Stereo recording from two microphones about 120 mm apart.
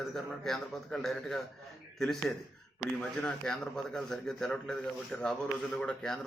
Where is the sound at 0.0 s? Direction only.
Centre (ahead or behind).